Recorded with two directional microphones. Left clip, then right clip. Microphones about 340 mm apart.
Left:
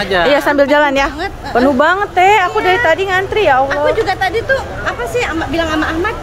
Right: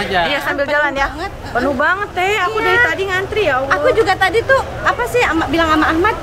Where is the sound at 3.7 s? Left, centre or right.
Centre.